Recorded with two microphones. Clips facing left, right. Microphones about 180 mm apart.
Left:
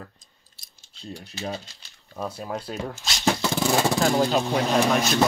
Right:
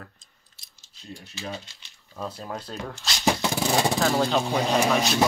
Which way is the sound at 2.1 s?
10° left (ahead or behind).